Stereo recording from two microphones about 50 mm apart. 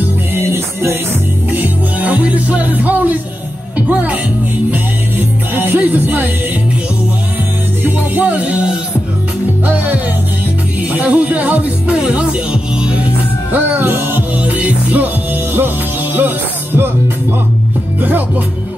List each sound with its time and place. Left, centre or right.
0.4 s music: right
1.5 s music: right
3.7 s speech: right
4.6 s music: right
7.8 s music: right
10.8 s music: right
11.9 s music: centre
13.7 s music: right
15.5 s music: right